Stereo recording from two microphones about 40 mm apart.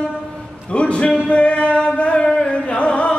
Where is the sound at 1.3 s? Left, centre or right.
Left.